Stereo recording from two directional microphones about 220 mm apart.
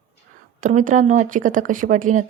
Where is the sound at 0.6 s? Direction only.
35° right (ahead or behind).